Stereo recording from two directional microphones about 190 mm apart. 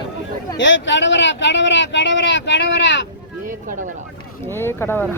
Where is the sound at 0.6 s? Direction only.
75° left (ahead or behind).